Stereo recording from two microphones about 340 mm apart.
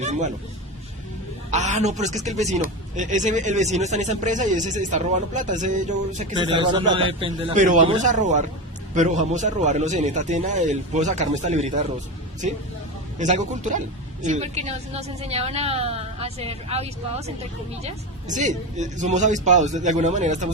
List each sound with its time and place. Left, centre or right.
0.0 s a man's voice: centre
1.5 s a man's voice: right
13.1 s a woman's voice: right